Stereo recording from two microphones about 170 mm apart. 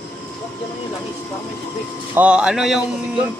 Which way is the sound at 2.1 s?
5° right (ahead or behind).